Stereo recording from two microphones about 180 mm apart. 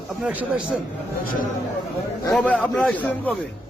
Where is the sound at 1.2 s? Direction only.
50° left (ahead or behind).